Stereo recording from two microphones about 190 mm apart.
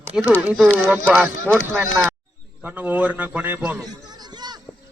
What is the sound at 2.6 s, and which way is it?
A man's voice, 10° right (ahead or behind).